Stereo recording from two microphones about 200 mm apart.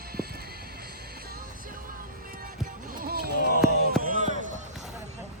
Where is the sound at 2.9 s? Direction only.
50° right (ahead or behind).